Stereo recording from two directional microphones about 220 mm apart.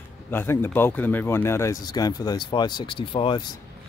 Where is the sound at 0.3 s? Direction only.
10° left (ahead or behind).